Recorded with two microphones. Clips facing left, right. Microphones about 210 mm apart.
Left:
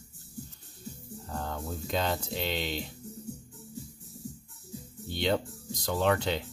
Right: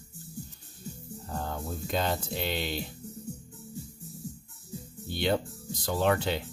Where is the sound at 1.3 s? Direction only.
5° right (ahead or behind).